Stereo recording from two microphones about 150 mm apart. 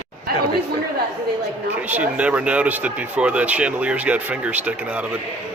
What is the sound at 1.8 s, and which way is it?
Speech, 10° right (ahead or behind).